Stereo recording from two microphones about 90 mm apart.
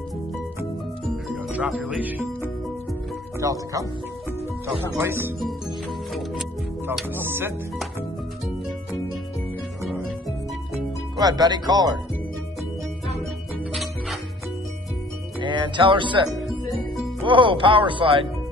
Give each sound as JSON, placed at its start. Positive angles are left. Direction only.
{"t": 1.5, "sound": "speech", "side_deg": -10}
{"t": 3.3, "sound": "speech", "side_deg": -40}
{"t": 5.0, "sound": "speech", "side_deg": -25}
{"t": 7.2, "sound": "speech", "side_deg": -25}
{"t": 11.1, "sound": "speech", "side_deg": -50}
{"t": 15.4, "sound": "speech", "side_deg": -65}
{"t": 16.3, "sound": "music", "side_deg": 0}
{"t": 17.2, "sound": "speech", "side_deg": -70}